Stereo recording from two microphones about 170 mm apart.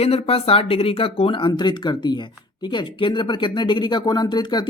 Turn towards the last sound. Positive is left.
turn(degrees=25)  # may be behind; listen again after turning